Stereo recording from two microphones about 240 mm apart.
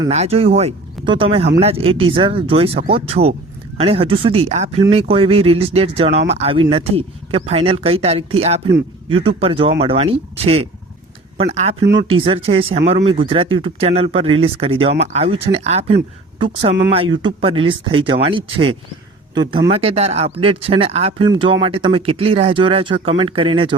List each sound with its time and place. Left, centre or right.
0.1 s speech: right